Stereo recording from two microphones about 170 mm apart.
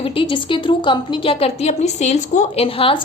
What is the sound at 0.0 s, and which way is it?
A woman's voice, 30° left (ahead or behind).